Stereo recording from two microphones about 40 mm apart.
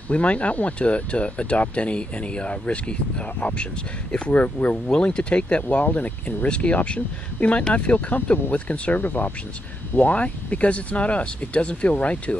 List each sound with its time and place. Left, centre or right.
0.1 s speech: left
4.9 s speech: left
5.9 s speech: left
8.9 s speech: left
10.0 s speech: left